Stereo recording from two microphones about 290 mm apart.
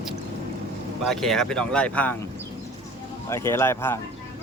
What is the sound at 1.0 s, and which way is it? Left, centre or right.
Speech, centre.